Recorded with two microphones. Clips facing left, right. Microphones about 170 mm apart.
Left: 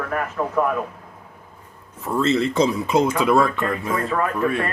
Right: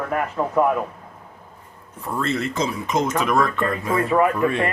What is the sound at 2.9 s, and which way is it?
Speech, 10° left (ahead or behind).